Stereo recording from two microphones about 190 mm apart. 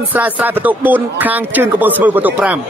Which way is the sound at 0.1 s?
10° right (ahead or behind).